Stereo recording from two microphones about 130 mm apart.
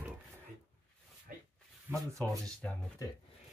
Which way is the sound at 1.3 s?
90° right.